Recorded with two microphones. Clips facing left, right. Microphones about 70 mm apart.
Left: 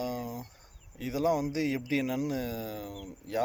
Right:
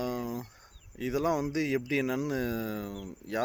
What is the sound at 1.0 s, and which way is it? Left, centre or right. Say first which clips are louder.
Speech: even; right.